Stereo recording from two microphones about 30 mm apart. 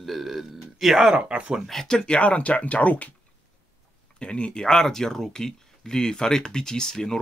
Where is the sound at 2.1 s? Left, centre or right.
Left.